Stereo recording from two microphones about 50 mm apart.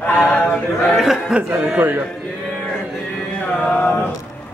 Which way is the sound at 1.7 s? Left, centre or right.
Right.